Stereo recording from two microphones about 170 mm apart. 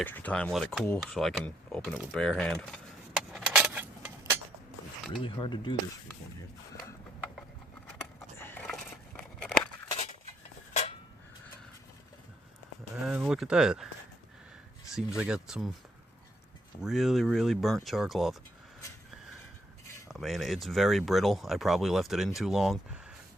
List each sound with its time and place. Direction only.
0.0 s speech: 10° left (ahead or behind)
3.3 s a sound: 5° right (ahead or behind)
5.2 s speech: 30° left (ahead or behind)
8.4 s a sound: 15° left (ahead or behind)
9.9 s a sound: 35° left (ahead or behind)
13.1 s speech: 5° right (ahead or behind)
14.9 s speech: 5° right (ahead or behind)
16.8 s speech: centre (ahead or behind)
20.1 s speech: centre (ahead or behind)